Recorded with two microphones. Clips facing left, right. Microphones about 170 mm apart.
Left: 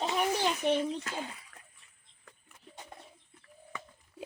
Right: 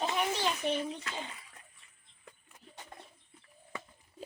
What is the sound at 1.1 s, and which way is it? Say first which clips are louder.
Speech: left 2 dB; 45° left (ahead or behind).